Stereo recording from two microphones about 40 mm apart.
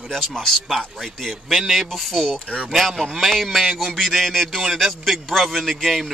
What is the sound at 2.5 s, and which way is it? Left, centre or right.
Speech, centre.